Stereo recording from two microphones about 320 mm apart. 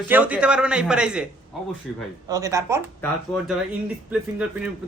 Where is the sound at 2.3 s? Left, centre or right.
Centre.